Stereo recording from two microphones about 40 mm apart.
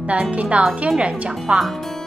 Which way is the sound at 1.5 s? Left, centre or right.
Right.